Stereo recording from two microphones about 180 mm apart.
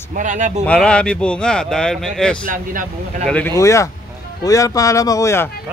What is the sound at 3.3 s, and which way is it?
Speech, 10° left (ahead or behind).